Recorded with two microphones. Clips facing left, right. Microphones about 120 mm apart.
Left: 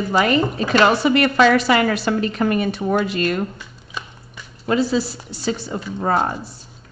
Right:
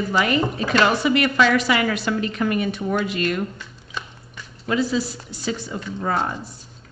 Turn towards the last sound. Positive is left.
turn(degrees=40)  # may be behind; listen again after turning